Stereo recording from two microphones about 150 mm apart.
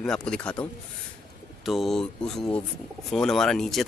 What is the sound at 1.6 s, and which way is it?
Speech, centre (ahead or behind).